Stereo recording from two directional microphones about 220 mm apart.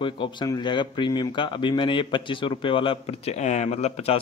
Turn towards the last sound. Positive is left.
turn(degrees=30)  # may be behind; listen again after turning